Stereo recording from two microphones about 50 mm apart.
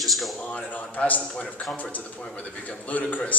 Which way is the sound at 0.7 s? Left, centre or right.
Left.